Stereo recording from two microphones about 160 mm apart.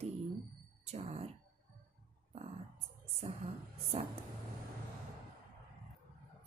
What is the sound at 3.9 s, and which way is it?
Speech, 40° right (ahead or behind).